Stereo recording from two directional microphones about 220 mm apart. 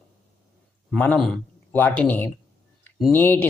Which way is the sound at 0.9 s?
5° left (ahead or behind).